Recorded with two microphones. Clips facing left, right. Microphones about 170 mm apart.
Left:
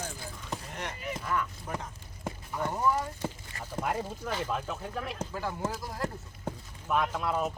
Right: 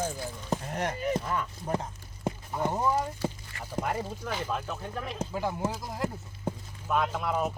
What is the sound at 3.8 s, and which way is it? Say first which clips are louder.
Speech: left 1 dB; 5° right (ahead or behind).